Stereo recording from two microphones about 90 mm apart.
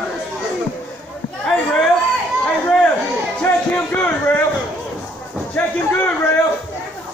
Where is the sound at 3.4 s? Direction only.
15° left (ahead or behind).